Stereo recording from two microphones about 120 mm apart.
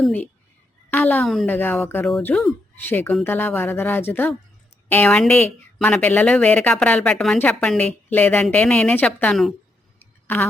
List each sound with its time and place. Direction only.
0.9 s a woman's voice: 15° left (ahead or behind)
1.2 s a woman's voice: centre (ahead or behind)
1.5 s a woman's voice: 15° left (ahead or behind)
10.2 s a sound: 15° left (ahead or behind)